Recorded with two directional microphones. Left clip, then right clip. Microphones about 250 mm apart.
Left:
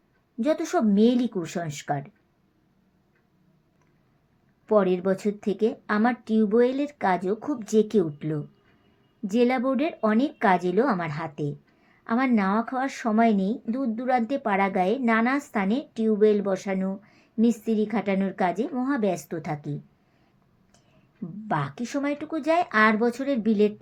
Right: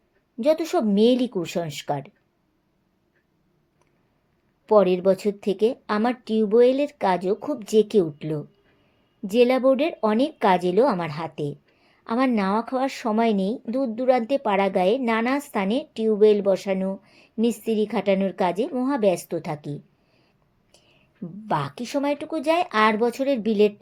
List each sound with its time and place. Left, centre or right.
0.3 s speech: right
4.6 s speech: right
21.4 s speech: right